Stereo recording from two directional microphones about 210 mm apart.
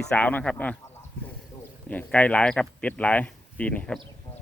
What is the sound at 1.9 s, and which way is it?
Speech, 5° left (ahead or behind).